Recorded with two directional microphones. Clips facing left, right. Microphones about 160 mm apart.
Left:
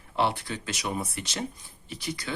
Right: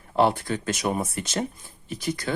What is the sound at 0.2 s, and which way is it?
Speech, 45° right (ahead or behind).